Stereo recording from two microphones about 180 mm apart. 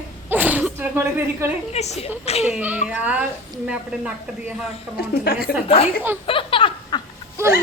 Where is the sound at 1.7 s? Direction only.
35° left (ahead or behind).